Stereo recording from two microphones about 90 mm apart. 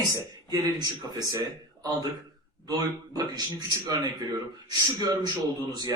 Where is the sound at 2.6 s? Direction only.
45° right (ahead or behind).